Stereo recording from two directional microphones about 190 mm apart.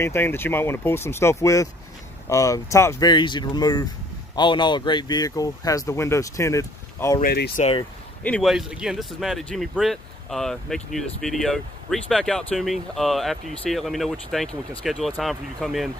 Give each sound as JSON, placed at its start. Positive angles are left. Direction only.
{"t": 0.0, "sound": "speech", "side_deg": 10}
{"t": 7.2, "sound": "speech", "side_deg": 55}
{"t": 8.2, "sound": "speech", "side_deg": 5}